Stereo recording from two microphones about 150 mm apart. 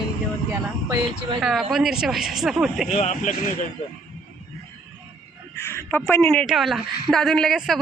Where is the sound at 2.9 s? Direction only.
50° left (ahead or behind).